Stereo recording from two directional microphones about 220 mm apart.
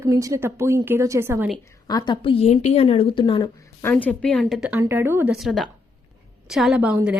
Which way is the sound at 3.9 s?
5° left (ahead or behind).